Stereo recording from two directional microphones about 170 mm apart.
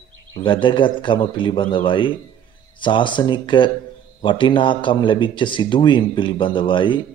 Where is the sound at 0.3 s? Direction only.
30° left (ahead or behind).